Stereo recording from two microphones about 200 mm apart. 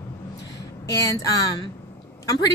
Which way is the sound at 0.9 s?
15° left (ahead or behind).